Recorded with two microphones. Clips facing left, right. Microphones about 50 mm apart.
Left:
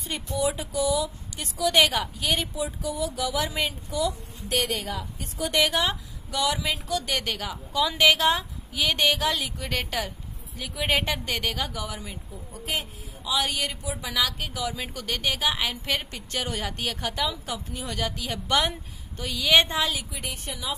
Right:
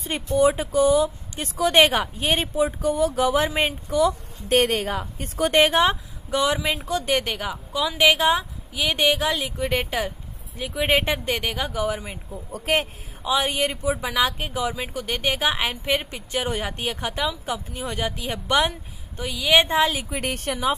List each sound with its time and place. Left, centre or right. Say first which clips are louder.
0.0 s a woman's voice: right 8 dB; right
12.5 s speech: right 8 dB; right
13.2 s a woman's voice: right 5 dB; right
19.2 s a woman's voice: right 2 dB; centre
19.7 s a woman's voice: right 6 dB; right
20.2 s a woman's voice: right 8 dB; right